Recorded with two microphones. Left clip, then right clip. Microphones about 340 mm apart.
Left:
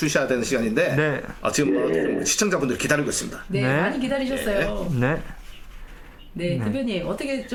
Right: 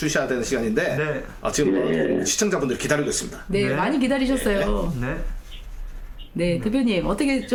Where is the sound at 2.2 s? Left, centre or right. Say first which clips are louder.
Even; left.